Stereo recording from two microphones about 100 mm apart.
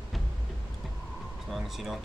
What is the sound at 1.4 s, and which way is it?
Speech, centre (ahead or behind).